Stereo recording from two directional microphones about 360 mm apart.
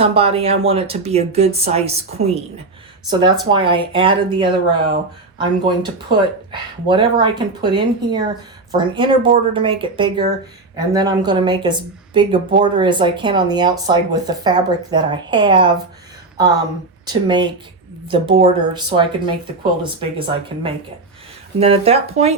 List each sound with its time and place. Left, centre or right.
0.0 s speech: centre
17.1 s speech: centre